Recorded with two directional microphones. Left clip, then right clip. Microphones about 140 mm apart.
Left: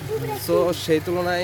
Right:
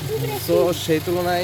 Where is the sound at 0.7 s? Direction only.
35° left (ahead or behind).